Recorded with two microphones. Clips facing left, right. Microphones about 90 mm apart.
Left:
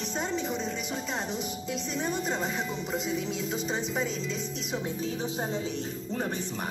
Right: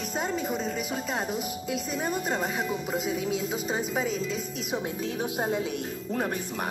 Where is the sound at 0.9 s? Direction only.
5° right (ahead or behind).